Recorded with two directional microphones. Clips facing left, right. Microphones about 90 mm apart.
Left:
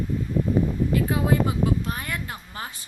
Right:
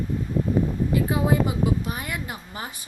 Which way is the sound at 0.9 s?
20° right (ahead or behind).